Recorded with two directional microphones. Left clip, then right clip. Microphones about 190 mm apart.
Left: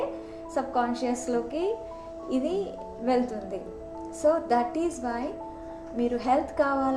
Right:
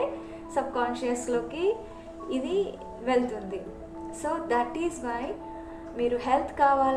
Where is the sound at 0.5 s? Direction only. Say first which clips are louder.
Left 1 dB; 45° left (ahead or behind).